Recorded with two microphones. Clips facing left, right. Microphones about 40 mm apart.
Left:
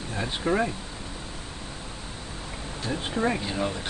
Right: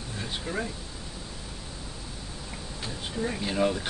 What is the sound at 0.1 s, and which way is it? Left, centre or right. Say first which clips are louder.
Speech: left 7 dB; left.